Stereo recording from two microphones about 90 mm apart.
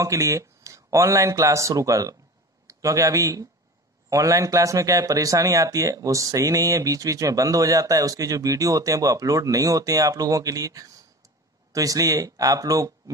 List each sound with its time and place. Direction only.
0.0 s speech: 35° right (ahead or behind)